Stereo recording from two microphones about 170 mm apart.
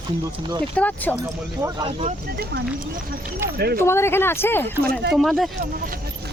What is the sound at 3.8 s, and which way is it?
Speech, 15° left (ahead or behind).